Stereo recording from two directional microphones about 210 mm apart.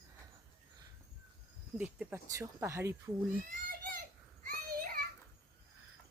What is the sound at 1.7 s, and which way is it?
Speech, 5° right (ahead or behind).